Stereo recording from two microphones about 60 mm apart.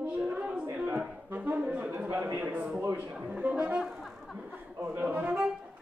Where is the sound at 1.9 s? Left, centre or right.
Right.